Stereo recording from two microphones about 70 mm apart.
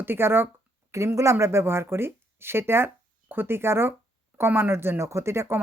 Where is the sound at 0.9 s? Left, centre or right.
Right.